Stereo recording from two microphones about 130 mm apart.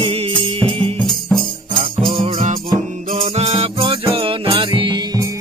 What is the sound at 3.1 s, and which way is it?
Music, 50° right (ahead or behind).